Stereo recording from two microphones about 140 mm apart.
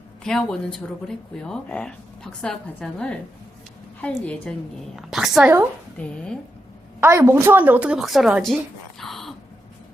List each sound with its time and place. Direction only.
0.3 s a woman's voice: 5° left (ahead or behind)
7.0 s a woman's voice: 20° right (ahead or behind); by 8.5 s centre (ahead or behind)
9.0 s a sound: centre (ahead or behind)